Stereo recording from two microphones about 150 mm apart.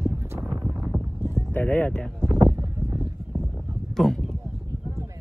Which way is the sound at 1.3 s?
15° left (ahead or behind).